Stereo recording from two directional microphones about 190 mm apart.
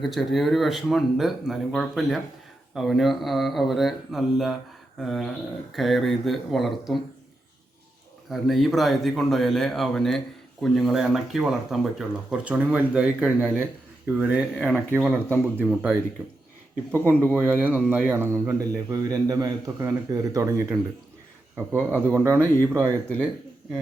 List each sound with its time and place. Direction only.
0.0 s speech: centre (ahead or behind)
8.3 s a man's voice: centre (ahead or behind); by 22.9 s 15° right (ahead or behind)
22.9 s speech: 5° left (ahead or behind)